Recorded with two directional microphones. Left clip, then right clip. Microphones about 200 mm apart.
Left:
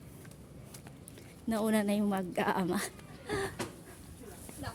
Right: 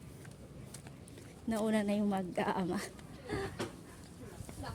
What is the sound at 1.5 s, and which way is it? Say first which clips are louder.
A woman's voice: left 2 dB; 15° left (ahead or behind).